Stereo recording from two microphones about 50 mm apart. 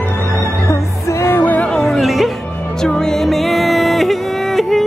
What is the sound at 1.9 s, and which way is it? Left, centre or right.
Music, centre.